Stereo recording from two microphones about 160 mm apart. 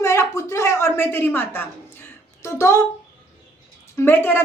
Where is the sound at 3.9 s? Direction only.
15° left (ahead or behind).